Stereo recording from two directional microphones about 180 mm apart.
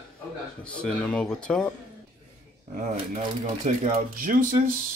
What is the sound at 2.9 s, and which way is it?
Speech, 40° right (ahead or behind).